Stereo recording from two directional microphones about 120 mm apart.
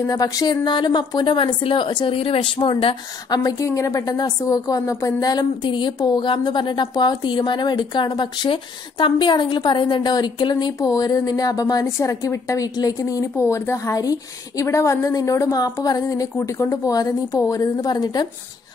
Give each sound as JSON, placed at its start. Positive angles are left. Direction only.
{"t": 0.0, "sound": "a woman's voice", "side_deg": 30}
{"t": 3.3, "sound": "a woman's voice", "side_deg": 30}